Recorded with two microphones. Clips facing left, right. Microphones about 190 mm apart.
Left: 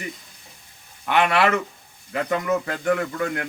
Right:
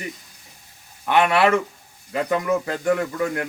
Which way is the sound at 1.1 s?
30° right (ahead or behind).